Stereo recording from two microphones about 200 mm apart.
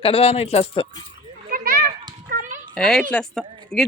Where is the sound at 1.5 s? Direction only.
45° right (ahead or behind).